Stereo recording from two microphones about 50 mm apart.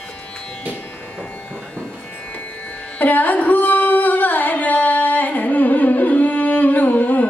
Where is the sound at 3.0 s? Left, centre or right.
Left.